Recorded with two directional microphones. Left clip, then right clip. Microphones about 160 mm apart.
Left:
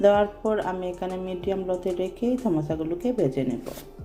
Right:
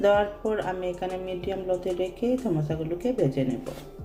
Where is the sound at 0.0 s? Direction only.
35° left (ahead or behind).